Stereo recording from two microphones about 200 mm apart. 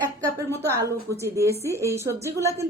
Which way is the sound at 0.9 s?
15° right (ahead or behind).